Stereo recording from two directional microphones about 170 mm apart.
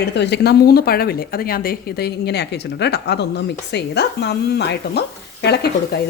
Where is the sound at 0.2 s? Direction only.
75° left (ahead or behind).